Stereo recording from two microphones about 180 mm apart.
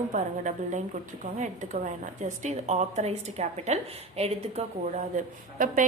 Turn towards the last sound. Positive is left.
turn(degrees=-45)  # may be behind; listen again after turning